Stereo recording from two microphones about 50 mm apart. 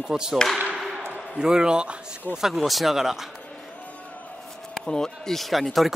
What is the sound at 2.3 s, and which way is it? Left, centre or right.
Speech, centre.